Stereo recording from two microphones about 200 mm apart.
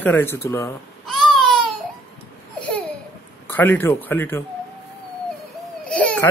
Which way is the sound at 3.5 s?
10° left (ahead or behind).